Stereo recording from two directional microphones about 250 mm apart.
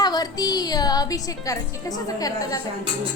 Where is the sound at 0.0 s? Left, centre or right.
Centre.